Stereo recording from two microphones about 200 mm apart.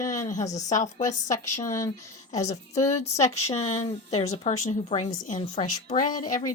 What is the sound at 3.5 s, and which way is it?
A woman's voice, 35° left (ahead or behind).